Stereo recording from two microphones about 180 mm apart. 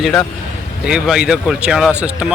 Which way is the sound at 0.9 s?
5° right (ahead or behind).